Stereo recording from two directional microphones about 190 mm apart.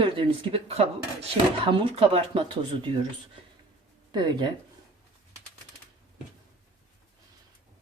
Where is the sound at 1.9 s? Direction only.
30° right (ahead or behind).